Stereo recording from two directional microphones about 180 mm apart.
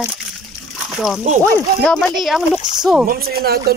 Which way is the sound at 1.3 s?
35° right (ahead or behind).